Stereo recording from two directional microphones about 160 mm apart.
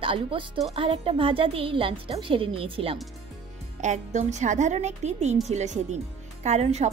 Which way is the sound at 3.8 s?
45° right (ahead or behind).